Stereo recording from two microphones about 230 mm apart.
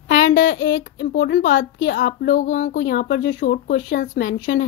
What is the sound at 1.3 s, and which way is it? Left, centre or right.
Speech, left.